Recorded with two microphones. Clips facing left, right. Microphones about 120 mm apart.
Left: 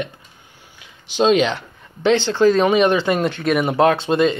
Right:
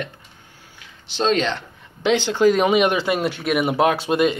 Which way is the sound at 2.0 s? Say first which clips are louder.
Left 2 dB; 10° right (ahead or behind).